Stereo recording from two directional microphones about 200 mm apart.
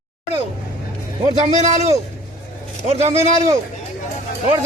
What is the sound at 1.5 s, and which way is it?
A man's voice, 35° right (ahead or behind).